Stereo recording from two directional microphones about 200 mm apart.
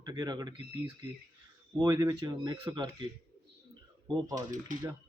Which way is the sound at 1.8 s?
15° right (ahead or behind).